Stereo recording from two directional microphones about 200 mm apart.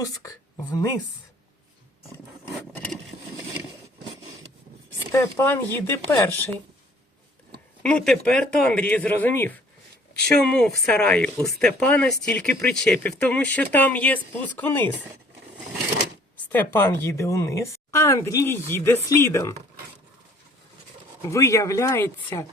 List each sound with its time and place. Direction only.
0.0 s speech: 15° left (ahead or behind)
5.1 s speech: 15° left (ahead or behind)
7.8 s speech: 5° left (ahead or behind)
16.5 s speech: 10° left (ahead or behind)
21.2 s speech: 15° left (ahead or behind)